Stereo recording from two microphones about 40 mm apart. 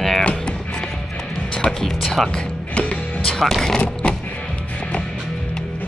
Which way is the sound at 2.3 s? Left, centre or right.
Left.